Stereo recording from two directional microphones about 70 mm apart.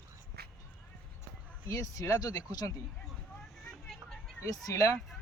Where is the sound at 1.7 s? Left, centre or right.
Left.